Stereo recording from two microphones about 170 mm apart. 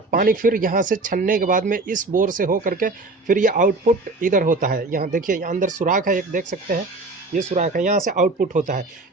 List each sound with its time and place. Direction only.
0.1 s speech: 55° right (ahead or behind)